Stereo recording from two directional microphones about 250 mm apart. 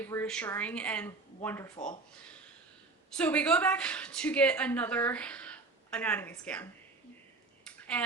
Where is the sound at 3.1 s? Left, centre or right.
Centre.